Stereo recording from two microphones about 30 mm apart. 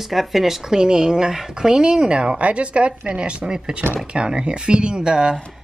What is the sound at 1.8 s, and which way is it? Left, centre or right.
Speech, right.